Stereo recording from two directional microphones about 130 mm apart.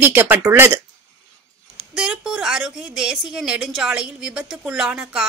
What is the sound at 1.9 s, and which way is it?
A woman's voice, centre (ahead or behind).